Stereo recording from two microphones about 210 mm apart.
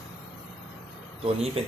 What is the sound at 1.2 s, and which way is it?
Speech, 30° right (ahead or behind).